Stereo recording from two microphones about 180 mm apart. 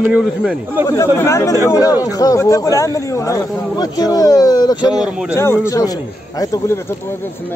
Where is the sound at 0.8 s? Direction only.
15° left (ahead or behind).